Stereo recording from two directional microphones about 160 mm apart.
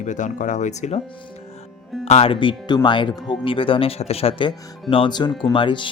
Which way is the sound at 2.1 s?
40° left (ahead or behind).